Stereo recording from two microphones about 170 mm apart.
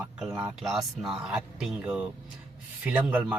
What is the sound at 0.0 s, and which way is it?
A man's voice, 5° right (ahead or behind).